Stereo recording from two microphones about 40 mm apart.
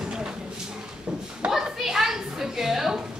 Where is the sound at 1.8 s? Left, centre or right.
Centre.